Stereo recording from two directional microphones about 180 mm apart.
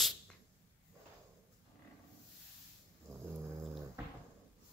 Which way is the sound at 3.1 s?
5° left (ahead or behind).